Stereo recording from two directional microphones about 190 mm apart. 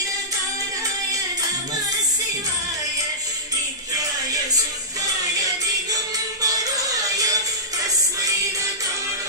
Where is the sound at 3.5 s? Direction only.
20° right (ahead or behind).